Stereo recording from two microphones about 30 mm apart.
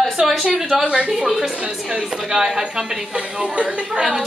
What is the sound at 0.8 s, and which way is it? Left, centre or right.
Speech, right.